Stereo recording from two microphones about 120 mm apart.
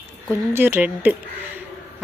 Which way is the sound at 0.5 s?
20° right (ahead or behind).